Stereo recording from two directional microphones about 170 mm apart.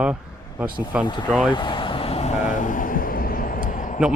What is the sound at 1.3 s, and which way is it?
Speech, 5° right (ahead or behind).